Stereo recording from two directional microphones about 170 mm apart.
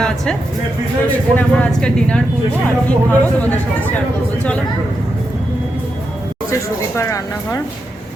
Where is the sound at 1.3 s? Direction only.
5° left (ahead or behind).